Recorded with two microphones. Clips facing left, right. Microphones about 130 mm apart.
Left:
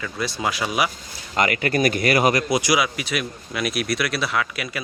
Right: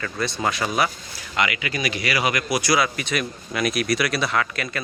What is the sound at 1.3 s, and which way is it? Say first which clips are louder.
Speech: left 4 dB; 45° left (ahead or behind).